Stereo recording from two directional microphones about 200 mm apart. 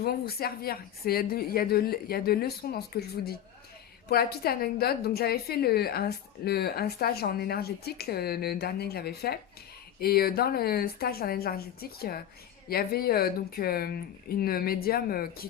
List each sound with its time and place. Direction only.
0.0 s a woman's voice: 50° left (ahead or behind)